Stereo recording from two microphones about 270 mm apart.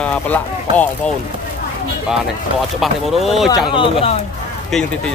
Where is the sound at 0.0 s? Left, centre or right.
Centre.